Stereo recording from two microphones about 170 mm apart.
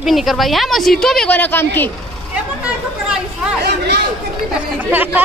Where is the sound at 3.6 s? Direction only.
80° right.